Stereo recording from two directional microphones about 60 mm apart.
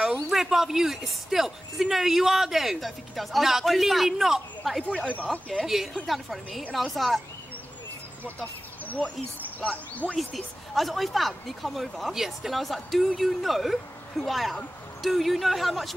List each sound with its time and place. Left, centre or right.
0.3 s speech: centre
5.1 s speech: left
6.0 s speech: centre
8.8 s a sound: left
9.6 s speech: left
10.1 s speech: centre